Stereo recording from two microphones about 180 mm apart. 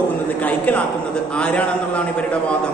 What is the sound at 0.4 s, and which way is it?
A man's voice, 10° left (ahead or behind).